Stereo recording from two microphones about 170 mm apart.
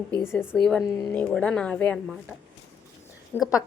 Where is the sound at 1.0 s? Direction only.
5° left (ahead or behind).